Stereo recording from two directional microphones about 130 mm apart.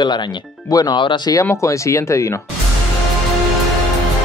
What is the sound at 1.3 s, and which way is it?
Speech, 25° left (ahead or behind).